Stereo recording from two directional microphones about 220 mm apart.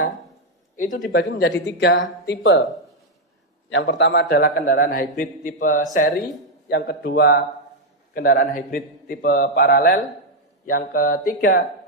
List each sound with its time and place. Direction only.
0.7 s speech: 40° left (ahead or behind)
1.1 s speech: 50° left (ahead or behind)
3.7 s a man's voice: 50° left (ahead or behind)
6.7 s a man's voice: 50° left (ahead or behind)